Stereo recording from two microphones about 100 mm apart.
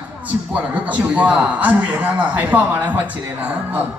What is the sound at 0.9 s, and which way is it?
A man's voice, 10° right (ahead or behind).